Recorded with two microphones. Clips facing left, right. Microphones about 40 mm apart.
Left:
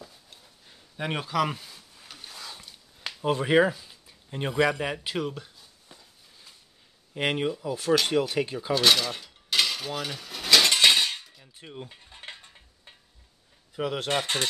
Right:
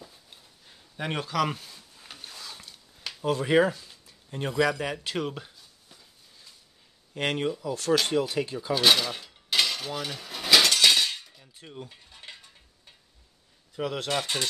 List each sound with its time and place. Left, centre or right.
0.7 s a sound: centre
2.1 s a sound: centre
3.3 s speech: centre
3.5 s speech: centre
7.2 s speech: centre
8.7 s cutlery: centre
10.7 s cutlery: left
13.7 s speech: centre
14.0 s speech: left